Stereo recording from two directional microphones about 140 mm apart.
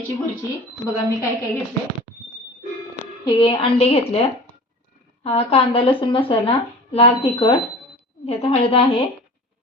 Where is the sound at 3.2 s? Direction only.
35° left (ahead or behind).